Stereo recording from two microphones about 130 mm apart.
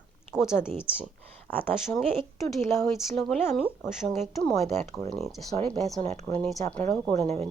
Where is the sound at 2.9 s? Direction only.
5° left (ahead or behind).